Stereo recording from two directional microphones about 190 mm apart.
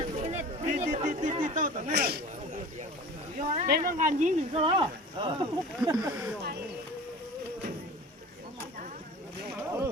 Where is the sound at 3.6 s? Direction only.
50° right (ahead or behind); by 5.4 s 25° right (ahead or behind).